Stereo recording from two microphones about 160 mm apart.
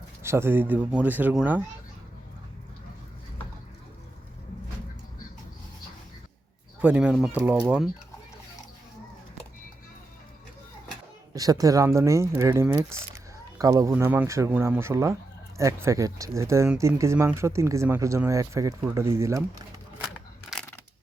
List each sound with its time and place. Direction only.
0.2 s speech: 15° right (ahead or behind)
6.8 s speech: 5° right (ahead or behind)
11.3 s speech: 20° right (ahead or behind)
13.9 s speech: 10° right (ahead or behind)